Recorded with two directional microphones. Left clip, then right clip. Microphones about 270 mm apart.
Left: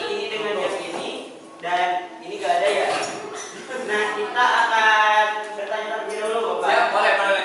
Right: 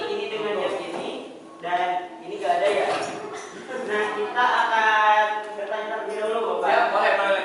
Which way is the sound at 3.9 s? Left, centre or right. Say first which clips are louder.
Left 2 dB; centre.